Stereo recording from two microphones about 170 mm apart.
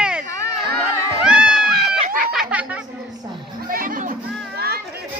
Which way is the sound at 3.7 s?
55° right (ahead or behind).